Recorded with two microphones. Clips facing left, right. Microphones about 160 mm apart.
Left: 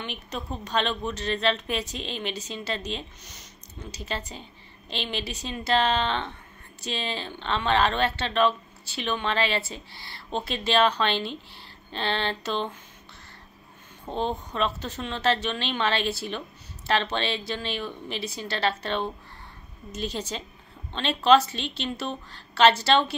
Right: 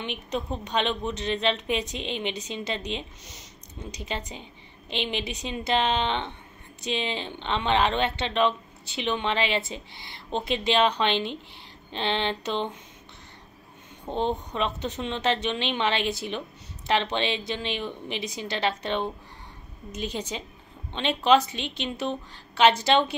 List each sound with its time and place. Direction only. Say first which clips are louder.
0.0 s a woman's voice: right 4 dB; 20° right (ahead or behind)
14.0 s a woman's voice: right 2 dB; 20° right (ahead or behind)